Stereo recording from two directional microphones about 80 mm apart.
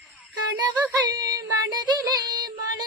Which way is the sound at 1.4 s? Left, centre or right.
Right.